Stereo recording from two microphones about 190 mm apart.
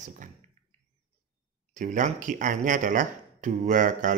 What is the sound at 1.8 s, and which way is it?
Speech, 40° right (ahead or behind).